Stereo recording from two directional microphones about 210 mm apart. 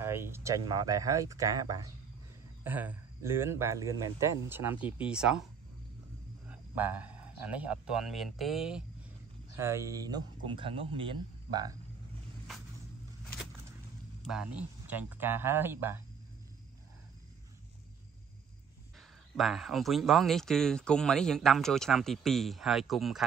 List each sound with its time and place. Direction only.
0.0 s a man's voice: 10° right (ahead or behind)
6.5 s speech: 10° right (ahead or behind)
14.2 s speech: 5° right (ahead or behind)
18.9 s a man's voice: centre (ahead or behind)